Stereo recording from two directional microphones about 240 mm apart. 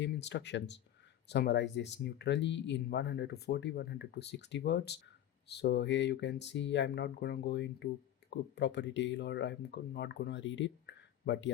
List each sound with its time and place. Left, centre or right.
0.0 s speech: left